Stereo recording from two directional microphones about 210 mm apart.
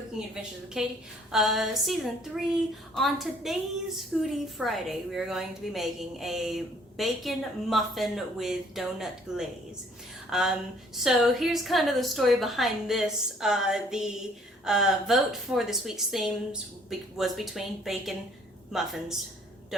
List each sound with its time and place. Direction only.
0.3 s a woman's voice: centre (ahead or behind)